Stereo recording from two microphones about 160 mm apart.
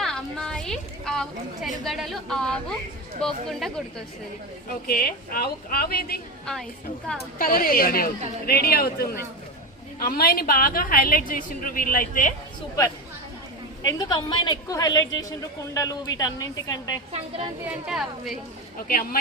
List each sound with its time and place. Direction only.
0.0 s a woman's voice: 5° left (ahead or behind)
4.9 s a woman's voice: 70° left (ahead or behind)
6.4 s a woman's voice: 5° left (ahead or behind)
7.3 s a woman's voice: 65° left (ahead or behind)
13.8 s a woman's voice: 25° left (ahead or behind)
17.1 s a woman's voice: 40° right (ahead or behind)
17.7 s speech: 5° right (ahead or behind)